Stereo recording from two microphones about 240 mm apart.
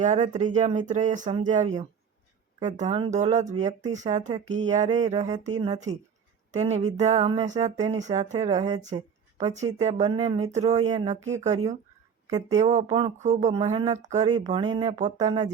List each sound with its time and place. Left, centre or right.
0.0 s speech: right